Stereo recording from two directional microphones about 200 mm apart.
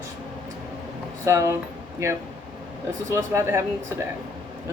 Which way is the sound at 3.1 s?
15° right (ahead or behind).